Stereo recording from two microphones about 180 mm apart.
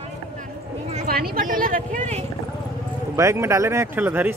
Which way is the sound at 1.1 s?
55° right (ahead or behind).